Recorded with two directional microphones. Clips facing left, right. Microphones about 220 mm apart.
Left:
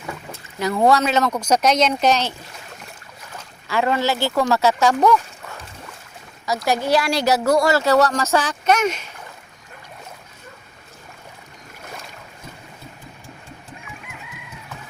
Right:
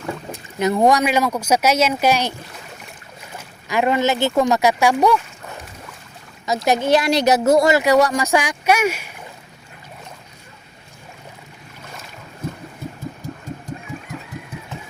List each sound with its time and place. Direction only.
0.3 s speech: 20° right (ahead or behind)
3.3 s speech: 15° right (ahead or behind)
6.4 s speech: 20° right (ahead or behind)
13.2 s a sound: 40° right (ahead or behind)